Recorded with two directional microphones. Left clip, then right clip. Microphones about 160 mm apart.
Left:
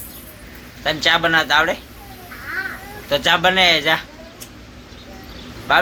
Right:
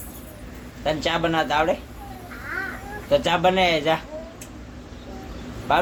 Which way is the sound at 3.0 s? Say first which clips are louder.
Left 3 dB; 5° right (ahead or behind).